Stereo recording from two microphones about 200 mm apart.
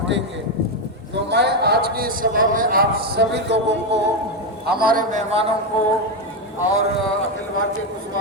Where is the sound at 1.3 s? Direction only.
55° right (ahead or behind).